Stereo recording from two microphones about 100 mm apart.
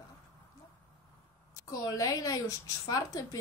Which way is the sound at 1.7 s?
35° left (ahead or behind).